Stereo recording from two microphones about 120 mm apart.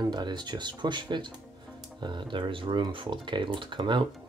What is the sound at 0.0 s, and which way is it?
Speech, 35° right (ahead or behind).